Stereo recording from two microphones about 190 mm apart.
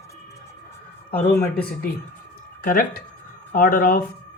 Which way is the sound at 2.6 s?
45° left (ahead or behind).